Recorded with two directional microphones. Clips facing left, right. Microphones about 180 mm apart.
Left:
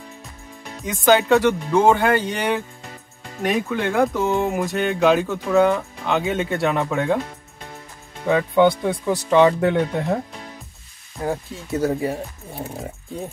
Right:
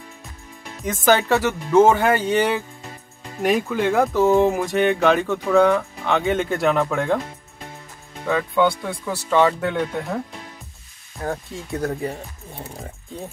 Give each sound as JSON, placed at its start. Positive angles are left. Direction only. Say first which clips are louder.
{"t": 0.8, "sound": "speech", "louder": "left 2 dB", "side_deg": 0}
{"t": 8.3, "sound": "speech", "louder": "left 3 dB", "side_deg": 20}
{"t": 11.2, "sound": "speech", "louder": "left 2 dB", "side_deg": 5}